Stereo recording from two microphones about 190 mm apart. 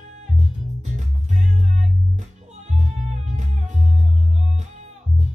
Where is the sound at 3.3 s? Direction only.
40° right (ahead or behind).